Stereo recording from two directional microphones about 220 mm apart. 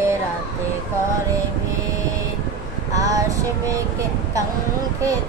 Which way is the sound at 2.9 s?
15° right (ahead or behind).